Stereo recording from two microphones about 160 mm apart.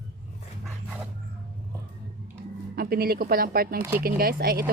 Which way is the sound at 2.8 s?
75° right (ahead or behind).